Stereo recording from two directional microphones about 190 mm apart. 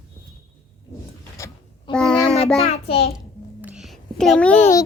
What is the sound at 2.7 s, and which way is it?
Speech, 30° left (ahead or behind).